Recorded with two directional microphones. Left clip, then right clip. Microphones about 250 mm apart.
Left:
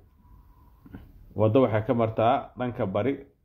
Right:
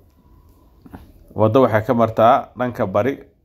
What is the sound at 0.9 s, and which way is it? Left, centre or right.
A man's voice, centre.